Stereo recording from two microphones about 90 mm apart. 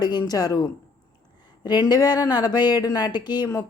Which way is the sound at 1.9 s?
50° left (ahead or behind).